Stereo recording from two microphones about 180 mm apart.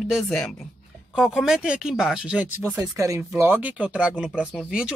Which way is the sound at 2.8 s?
15° right (ahead or behind).